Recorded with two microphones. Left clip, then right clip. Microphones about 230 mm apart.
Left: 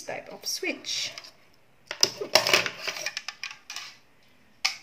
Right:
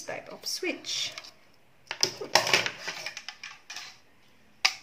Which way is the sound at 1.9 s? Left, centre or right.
Left.